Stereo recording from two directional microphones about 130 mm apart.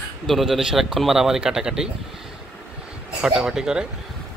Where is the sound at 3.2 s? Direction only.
5° right (ahead or behind).